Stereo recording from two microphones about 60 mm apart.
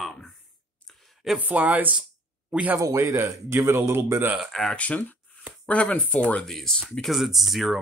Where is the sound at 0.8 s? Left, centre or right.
Centre.